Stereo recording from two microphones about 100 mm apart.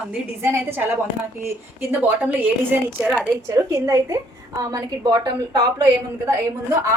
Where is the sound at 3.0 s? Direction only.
Centre (ahead or behind).